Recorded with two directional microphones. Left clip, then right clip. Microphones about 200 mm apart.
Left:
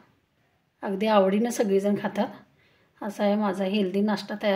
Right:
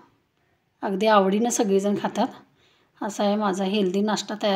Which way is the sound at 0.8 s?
30° right (ahead or behind).